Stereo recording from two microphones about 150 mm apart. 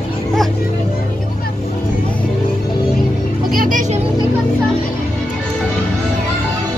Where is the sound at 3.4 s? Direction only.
65° right (ahead or behind).